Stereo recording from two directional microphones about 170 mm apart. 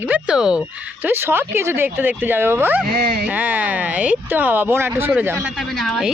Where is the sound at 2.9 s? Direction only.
70° right (ahead or behind).